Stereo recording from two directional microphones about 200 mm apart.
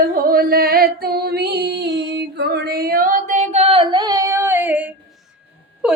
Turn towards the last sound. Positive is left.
turn(degrees=-5)  # may be behind; listen again after turning